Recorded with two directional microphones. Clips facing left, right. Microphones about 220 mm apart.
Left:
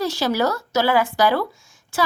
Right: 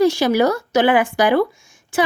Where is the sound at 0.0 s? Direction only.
15° right (ahead or behind).